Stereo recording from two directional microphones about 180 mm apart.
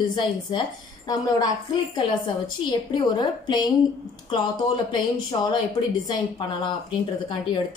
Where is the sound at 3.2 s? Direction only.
25° left (ahead or behind).